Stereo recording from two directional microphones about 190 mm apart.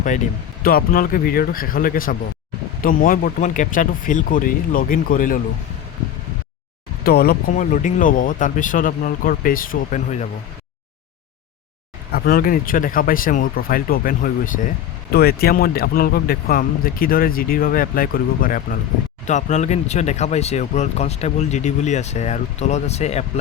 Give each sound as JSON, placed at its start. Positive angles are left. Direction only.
{"t": 0.6, "sound": "speech", "side_deg": 50}
{"t": 7.0, "sound": "speech", "side_deg": 55}
{"t": 12.1, "sound": "speech", "side_deg": 50}